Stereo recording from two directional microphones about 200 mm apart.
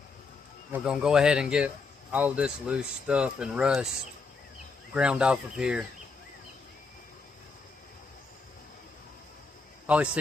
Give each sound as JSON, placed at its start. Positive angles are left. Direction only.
{"t": 0.7, "sound": "speech", "side_deg": -5}
{"t": 4.9, "sound": "speech", "side_deg": -5}
{"t": 9.8, "sound": "speech", "side_deg": -5}